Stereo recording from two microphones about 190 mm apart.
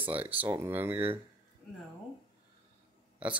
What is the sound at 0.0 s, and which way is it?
Speech, 10° right (ahead or behind).